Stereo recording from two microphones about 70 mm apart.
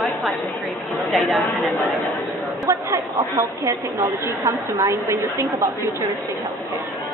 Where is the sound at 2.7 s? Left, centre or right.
Right.